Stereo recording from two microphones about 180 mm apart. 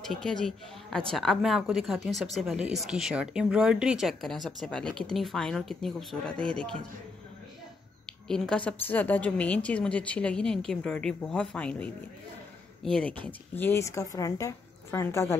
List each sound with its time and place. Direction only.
0.0 s speech: 5° left (ahead or behind)
8.3 s a woman's voice: 5° left (ahead or behind)